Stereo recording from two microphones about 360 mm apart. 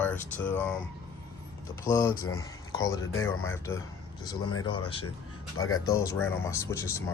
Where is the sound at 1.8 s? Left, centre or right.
Centre.